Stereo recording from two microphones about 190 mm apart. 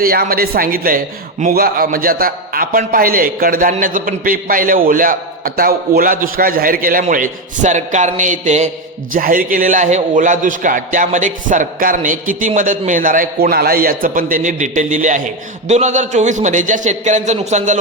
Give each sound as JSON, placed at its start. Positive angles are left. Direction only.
{"t": 0.0, "sound": "a man's voice", "side_deg": -50}